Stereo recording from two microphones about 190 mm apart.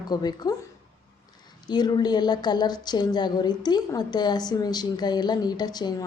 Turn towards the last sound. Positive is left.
turn(degrees=20)  # may be behind; listen again after turning